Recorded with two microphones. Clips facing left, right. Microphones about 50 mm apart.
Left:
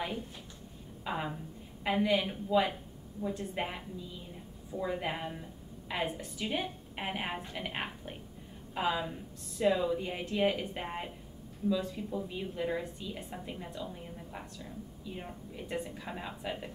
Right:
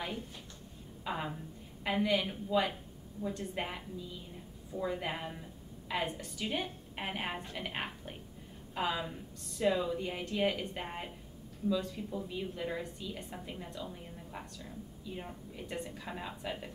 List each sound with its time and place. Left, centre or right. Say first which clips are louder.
1.0 s a woman's voice: left 2 dB; centre